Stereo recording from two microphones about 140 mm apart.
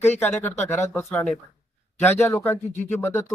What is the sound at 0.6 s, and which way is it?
Speech, 20° left (ahead or behind).